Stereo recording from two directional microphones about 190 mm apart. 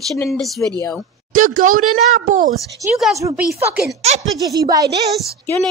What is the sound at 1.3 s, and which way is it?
Speech, 45° right (ahead or behind).